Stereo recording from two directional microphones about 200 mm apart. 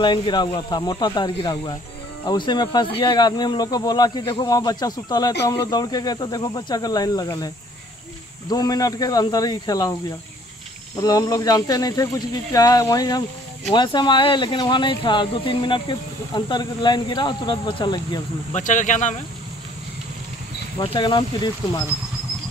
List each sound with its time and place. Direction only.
0.0 s speech: 25° left (ahead or behind)
18.5 s speech: 40° left (ahead or behind)
20.8 s speech: 25° left (ahead or behind)